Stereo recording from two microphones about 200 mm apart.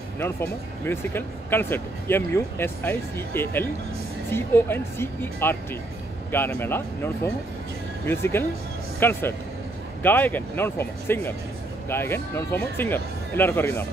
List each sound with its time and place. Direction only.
0.2 s speech: 10° left (ahead or behind)